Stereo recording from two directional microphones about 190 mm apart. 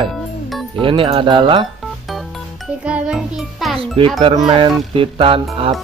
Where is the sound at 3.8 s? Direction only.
30° right (ahead or behind).